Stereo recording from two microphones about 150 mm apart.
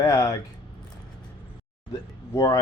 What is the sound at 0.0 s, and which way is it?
Speech, 20° left (ahead or behind).